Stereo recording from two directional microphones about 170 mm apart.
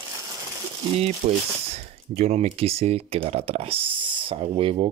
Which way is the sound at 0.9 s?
40° right (ahead or behind).